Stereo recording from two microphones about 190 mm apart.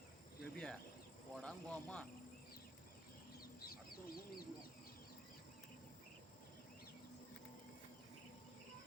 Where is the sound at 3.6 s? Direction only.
50° left (ahead or behind).